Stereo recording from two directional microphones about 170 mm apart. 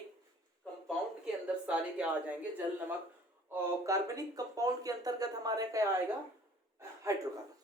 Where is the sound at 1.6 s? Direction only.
10° right (ahead or behind).